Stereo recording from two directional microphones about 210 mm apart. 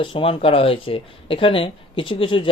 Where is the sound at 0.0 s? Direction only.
25° left (ahead or behind).